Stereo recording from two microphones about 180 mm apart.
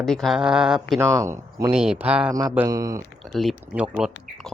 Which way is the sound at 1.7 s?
5° right (ahead or behind).